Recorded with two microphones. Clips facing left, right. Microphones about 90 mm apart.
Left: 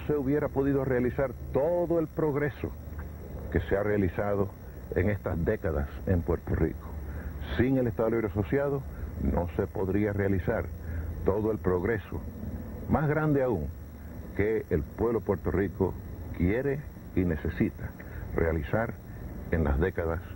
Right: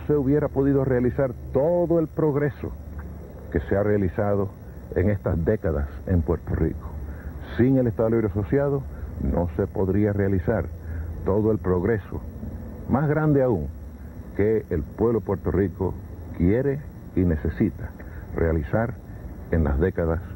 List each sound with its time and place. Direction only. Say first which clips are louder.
0.0 s a man's voice: right 6 dB; 15° right (ahead or behind)